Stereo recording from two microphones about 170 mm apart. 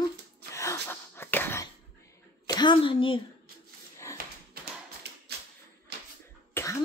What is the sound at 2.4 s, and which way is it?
Speech, 25° left (ahead or behind).